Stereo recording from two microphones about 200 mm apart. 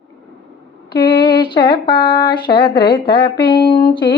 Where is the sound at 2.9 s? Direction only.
25° left (ahead or behind).